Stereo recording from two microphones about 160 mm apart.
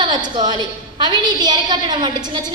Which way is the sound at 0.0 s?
25° right (ahead or behind).